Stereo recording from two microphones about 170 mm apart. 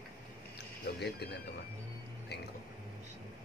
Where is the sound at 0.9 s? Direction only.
75° left (ahead or behind).